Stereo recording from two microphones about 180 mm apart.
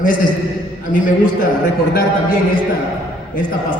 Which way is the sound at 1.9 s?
55° left (ahead or behind).